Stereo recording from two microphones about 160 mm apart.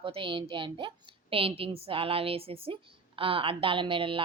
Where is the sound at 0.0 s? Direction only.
35° right (ahead or behind).